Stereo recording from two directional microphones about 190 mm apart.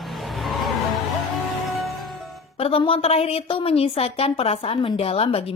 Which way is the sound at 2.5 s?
30° left (ahead or behind).